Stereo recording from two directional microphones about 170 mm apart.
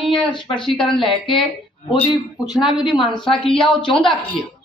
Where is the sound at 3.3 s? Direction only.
30° left (ahead or behind).